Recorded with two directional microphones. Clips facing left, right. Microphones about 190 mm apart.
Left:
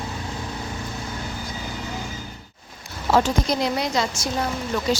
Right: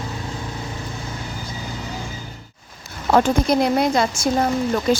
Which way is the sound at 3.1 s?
55° right (ahead or behind).